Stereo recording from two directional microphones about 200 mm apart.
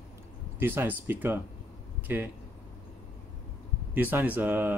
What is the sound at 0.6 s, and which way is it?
Speech, 10° right (ahead or behind).